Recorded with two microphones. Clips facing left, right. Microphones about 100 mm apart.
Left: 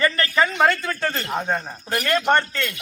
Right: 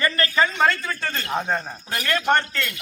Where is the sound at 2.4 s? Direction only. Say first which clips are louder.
Left 2 dB; 20° left (ahead or behind).